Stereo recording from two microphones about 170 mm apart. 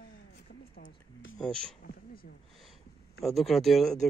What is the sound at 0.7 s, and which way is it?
Speech, 90° left.